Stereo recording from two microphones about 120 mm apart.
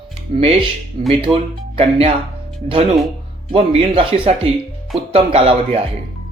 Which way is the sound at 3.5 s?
50° right (ahead or behind).